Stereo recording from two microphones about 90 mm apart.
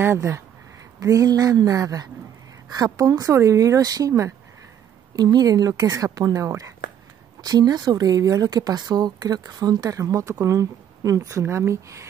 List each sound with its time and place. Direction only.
0.0 s speech: 30° right (ahead or behind)
0.9 s speech: 40° right (ahead or behind)
5.1 s speech: 50° right (ahead or behind); by 12.1 s 35° right (ahead or behind)